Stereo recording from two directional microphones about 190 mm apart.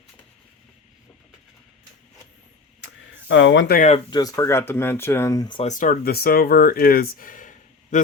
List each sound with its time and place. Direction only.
2.8 s a sound: 75° left (ahead or behind)
3.8 s speech: 35° left (ahead or behind)
4.1 s speech: 20° left (ahead or behind)
5.6 s speech: 45° left (ahead or behind)